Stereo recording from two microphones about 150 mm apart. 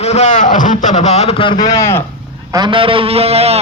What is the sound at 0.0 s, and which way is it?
Speech, 50° left (ahead or behind).